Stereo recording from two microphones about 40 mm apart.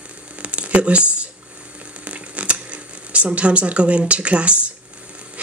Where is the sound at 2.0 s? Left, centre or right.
Right.